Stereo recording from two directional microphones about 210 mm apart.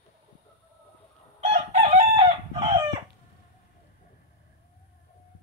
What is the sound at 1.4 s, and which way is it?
Chicken, 30° right (ahead or behind).